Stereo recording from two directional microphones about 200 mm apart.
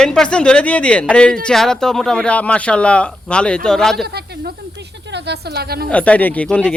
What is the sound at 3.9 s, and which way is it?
A woman's voice, 50° right (ahead or behind).